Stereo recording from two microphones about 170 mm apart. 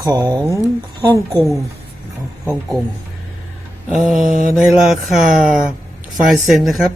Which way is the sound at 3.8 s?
5° right (ahead or behind).